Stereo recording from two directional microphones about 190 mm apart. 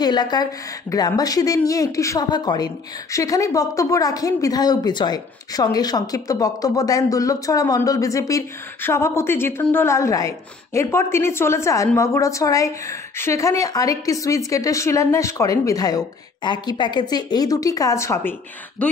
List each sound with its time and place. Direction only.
0.0 s a woman's voice: 20° left (ahead or behind)